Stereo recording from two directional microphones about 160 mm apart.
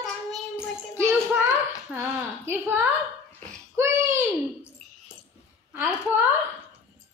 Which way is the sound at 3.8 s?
15° right (ahead or behind).